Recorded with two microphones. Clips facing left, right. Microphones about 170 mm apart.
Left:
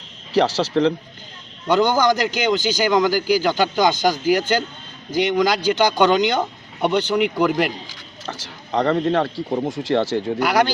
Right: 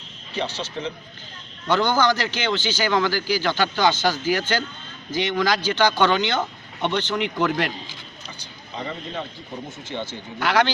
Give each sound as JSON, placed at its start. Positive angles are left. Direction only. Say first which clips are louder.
{"t": 0.3, "sound": "speech", "louder": "left 11 dB", "side_deg": 90}
{"t": 1.6, "sound": "a man's voice", "louder": "left 3 dB", "side_deg": 10}
{"t": 8.3, "sound": "speech", "louder": "left 13 dB", "side_deg": 85}